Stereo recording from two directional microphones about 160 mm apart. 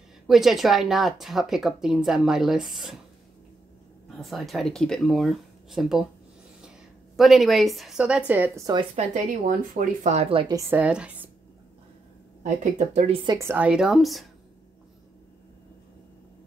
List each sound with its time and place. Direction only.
0.3 s a woman's voice: centre (ahead or behind)
4.2 s a woman's voice: centre (ahead or behind)
7.2 s a woman's voice: centre (ahead or behind)
8.9 s a woman's voice: 50° right (ahead or behind)
10.5 s speech: 20° right (ahead or behind)
10.8 s speech: 5° right (ahead or behind)
12.7 s speech: 40° right (ahead or behind)
13.3 s a woman's voice: 15° right (ahead or behind); by 14.3 s centre (ahead or behind)